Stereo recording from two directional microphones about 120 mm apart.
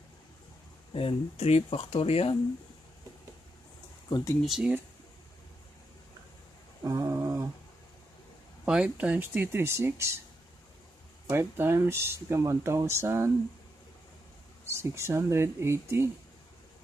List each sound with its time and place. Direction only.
0.9 s speech: 55° left (ahead or behind)
4.1 s speech: 25° left (ahead or behind)
4.4 s speech: 5° right (ahead or behind)
6.8 s a sound: 30° right (ahead or behind)
8.6 s speech: 5° right (ahead or behind)
11.2 s speech: 20° right (ahead or behind)
14.7 s speech: 20° right (ahead or behind)